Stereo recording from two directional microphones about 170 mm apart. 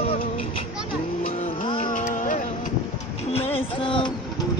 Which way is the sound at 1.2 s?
45° left (ahead or behind).